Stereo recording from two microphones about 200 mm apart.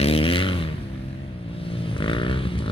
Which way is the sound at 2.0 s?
25° left (ahead or behind).